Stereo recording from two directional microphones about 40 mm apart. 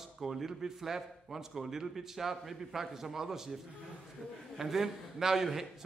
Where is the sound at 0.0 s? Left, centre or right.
Centre.